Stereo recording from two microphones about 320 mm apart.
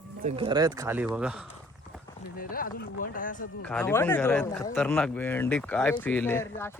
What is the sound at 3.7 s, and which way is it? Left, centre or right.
Speech, centre.